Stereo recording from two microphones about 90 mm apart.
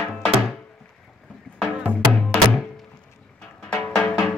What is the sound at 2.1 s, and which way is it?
Music, 5° left (ahead or behind).